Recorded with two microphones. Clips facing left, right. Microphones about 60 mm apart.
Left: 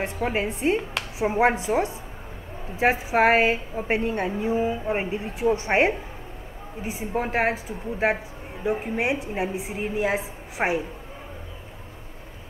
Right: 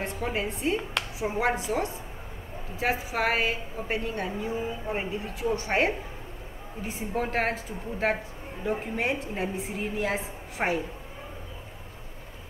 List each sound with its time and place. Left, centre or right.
0.2 s a woman's voice: left
6.8 s a woman's voice: centre